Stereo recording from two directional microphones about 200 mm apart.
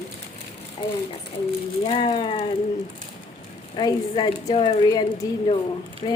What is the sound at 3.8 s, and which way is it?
A woman's voice, 20° left (ahead or behind).